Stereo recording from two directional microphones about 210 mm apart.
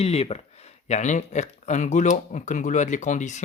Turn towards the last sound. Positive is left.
turn(degrees=35)  # may be behind; listen again after turning